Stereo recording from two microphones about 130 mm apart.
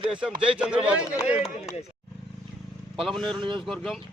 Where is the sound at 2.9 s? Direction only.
Centre (ahead or behind).